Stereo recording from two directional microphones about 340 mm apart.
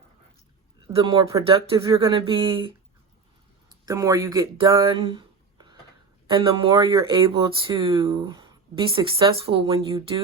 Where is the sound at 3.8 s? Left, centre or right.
Centre.